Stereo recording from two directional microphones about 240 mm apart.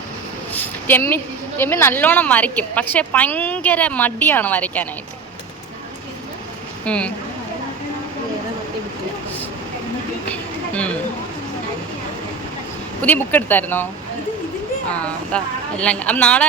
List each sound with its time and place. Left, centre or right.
0.5 s a woman's voice: centre
6.8 s a woman's voice: centre
13.0 s a woman's voice: centre
14.8 s a woman's voice: centre